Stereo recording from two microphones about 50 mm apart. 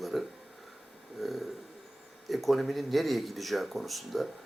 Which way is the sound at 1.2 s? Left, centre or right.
Centre.